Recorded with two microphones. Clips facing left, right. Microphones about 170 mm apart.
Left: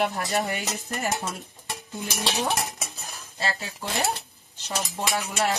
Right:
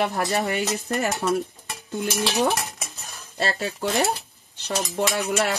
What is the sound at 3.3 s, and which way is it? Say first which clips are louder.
Speech: right 5 dB; 65° right (ahead or behind).